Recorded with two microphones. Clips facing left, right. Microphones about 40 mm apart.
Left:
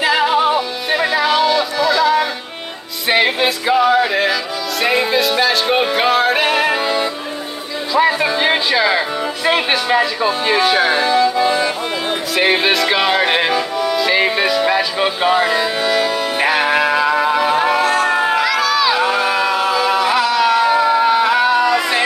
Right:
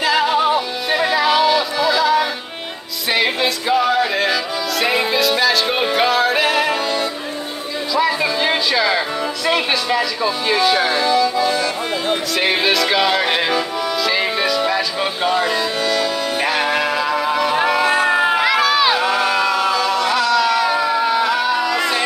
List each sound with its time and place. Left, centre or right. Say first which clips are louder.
0.0 s music: left 2 dB; centre
3.1 s music: left 3 dB; centre
7.9 s music: left 3 dB; left
8.5 s music: left 2 dB; centre
9.5 s music: left 3 dB; left
12.4 s music: left 4 dB; centre
13.9 s music: left 4 dB; centre
17.8 s music: even; centre
18.4 s a sound: even; right
18.9 s a sound: left 1 dB; centre